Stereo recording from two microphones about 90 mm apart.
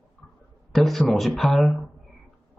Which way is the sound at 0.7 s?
Centre (ahead or behind).